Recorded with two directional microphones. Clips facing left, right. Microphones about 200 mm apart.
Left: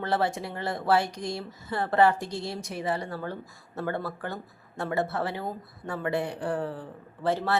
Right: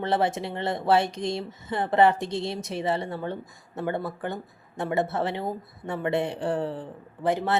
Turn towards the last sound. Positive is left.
turn(degrees=-20)  # may be behind; listen again after turning